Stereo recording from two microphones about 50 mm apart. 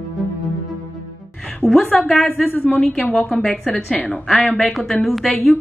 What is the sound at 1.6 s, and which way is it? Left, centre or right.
Speech, centre.